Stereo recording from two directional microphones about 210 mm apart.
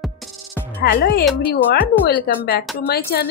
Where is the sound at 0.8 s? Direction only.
50° left (ahead or behind).